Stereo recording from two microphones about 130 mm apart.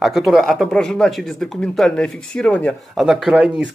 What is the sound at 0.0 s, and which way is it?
Speech, centre (ahead or behind).